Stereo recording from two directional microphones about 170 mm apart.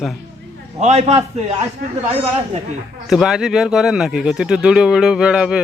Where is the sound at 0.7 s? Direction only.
40° right (ahead or behind).